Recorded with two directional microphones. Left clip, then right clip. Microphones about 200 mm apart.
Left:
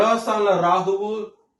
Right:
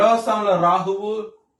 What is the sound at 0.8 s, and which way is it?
Speech, 25° right (ahead or behind).